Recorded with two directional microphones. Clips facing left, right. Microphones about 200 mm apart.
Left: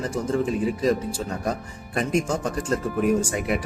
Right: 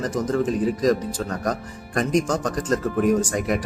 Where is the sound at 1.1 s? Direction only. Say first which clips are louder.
Right 2 dB; 10° left (ahead or behind).